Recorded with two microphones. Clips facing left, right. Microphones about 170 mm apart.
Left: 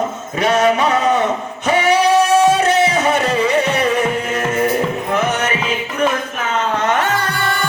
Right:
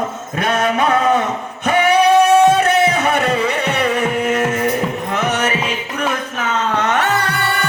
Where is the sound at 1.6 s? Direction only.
55° right (ahead or behind).